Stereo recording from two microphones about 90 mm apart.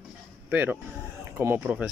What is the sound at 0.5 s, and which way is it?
Speech, 20° right (ahead or behind).